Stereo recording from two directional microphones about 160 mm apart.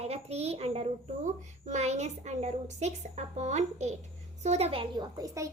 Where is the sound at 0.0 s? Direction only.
40° right (ahead or behind).